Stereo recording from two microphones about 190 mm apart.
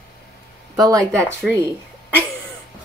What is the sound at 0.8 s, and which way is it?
Speech, 15° right (ahead or behind).